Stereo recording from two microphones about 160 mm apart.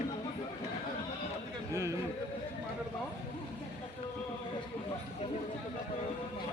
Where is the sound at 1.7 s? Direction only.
20° right (ahead or behind).